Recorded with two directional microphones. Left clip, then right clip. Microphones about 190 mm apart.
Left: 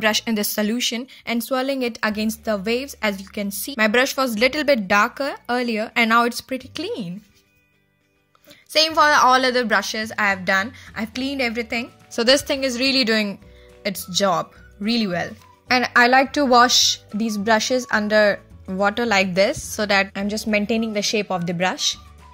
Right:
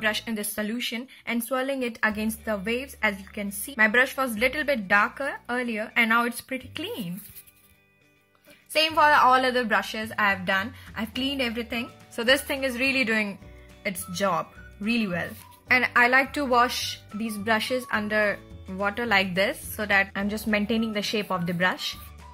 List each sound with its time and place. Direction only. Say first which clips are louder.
0.0 s speech: left 7 dB; 50° left (ahead or behind)
8.7 s speech: left 4 dB; 25° left (ahead or behind)
20.1 s speech: left 4 dB; 20° left (ahead or behind)